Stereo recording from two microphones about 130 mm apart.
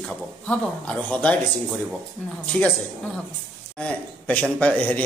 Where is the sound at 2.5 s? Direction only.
15° left (ahead or behind).